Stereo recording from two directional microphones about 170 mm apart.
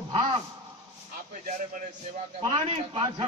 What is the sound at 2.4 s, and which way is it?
Speech, 35° right (ahead or behind).